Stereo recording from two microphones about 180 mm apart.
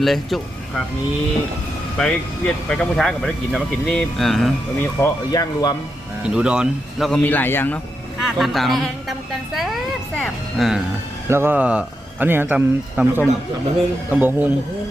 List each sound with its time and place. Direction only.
0.0 s speech: centre (ahead or behind)
2.0 s speech: 5° left (ahead or behind)
4.8 s speech: 15° left (ahead or behind)
6.2 s speech: 5° right (ahead or behind)
7.3 s a man's voice: 10° left (ahead or behind)
8.2 s speech: centre (ahead or behind)
11.3 s speech: 10° right (ahead or behind)